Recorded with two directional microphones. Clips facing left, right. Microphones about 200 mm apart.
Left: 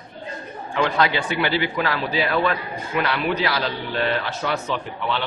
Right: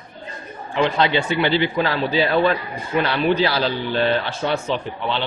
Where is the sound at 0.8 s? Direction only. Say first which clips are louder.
Right 2 dB; 25° right (ahead or behind).